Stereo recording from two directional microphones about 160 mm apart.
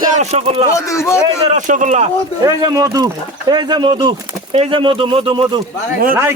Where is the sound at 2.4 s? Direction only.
25° right (ahead or behind).